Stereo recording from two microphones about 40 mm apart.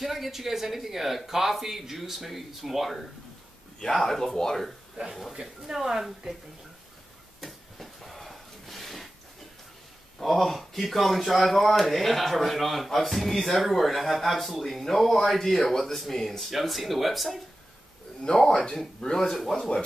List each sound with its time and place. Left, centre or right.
0.0 s speech: centre
4.9 s speech: centre
7.3 s a sound: centre
10.1 s speech: centre
18.3 s speech: left
19.1 s speech: centre
19.5 s speech: left